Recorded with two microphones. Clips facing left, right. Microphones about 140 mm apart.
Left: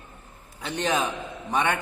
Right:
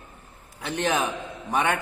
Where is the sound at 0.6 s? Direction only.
10° right (ahead or behind).